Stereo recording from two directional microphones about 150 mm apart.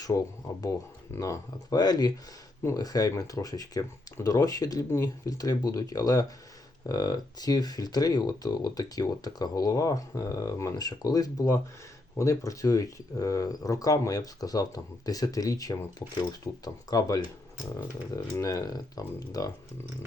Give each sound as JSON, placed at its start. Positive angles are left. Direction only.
{"t": 0.0, "sound": "speech", "side_deg": 25}